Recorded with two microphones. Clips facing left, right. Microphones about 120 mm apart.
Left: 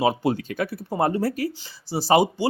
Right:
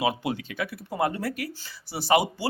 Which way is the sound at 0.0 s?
35° left (ahead or behind).